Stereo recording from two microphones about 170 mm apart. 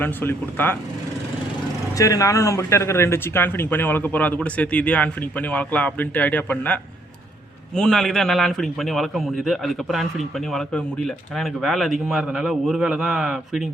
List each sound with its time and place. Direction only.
0.0 s speech: 10° left (ahead or behind)
2.0 s speech: 20° left (ahead or behind)
7.8 s speech: 5° left (ahead or behind)